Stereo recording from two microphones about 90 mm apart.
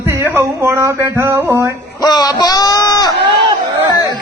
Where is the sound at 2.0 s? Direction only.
50° left (ahead or behind).